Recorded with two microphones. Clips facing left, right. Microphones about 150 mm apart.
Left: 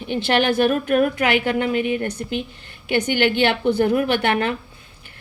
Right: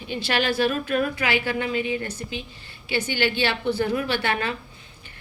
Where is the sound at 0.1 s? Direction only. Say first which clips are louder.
Left 6 dB; 55° left (ahead or behind).